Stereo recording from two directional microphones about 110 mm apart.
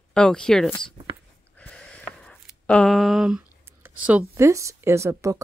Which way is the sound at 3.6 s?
20° right (ahead or behind).